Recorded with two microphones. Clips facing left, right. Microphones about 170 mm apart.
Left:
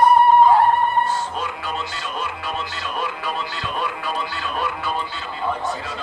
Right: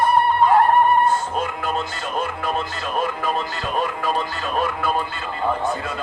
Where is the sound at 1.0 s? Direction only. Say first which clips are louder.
Right 4 dB; 50° right (ahead or behind).